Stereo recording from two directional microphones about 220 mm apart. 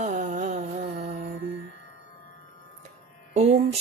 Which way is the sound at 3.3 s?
30° right (ahead or behind).